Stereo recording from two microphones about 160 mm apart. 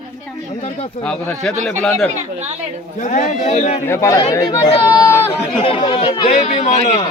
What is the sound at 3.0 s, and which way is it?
Speech, 50° left (ahead or behind).